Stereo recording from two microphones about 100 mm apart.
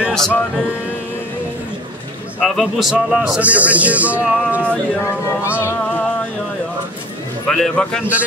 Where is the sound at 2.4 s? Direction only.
Centre (ahead or behind).